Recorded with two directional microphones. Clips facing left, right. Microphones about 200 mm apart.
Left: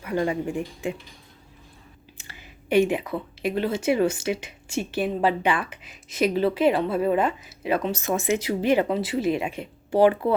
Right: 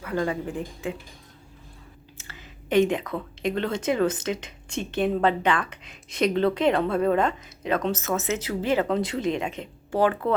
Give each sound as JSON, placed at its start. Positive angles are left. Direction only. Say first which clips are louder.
{"t": 0.0, "sound": "speech", "louder": "left 2 dB", "side_deg": 15}
{"t": 2.1, "sound": "speech", "louder": "right 2 dB", "side_deg": 15}